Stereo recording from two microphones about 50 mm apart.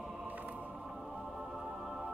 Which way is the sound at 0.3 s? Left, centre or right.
Right.